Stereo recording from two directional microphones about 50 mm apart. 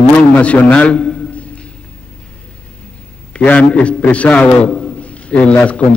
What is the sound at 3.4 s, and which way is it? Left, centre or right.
A man's voice, left.